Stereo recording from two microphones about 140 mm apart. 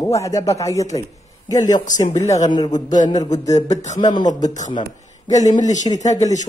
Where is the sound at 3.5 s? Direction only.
55° left (ahead or behind).